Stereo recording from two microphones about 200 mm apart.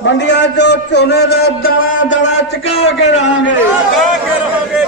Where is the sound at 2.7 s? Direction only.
30° left (ahead or behind).